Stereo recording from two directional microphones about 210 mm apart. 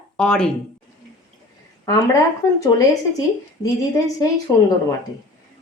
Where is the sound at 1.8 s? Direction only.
15° left (ahead or behind).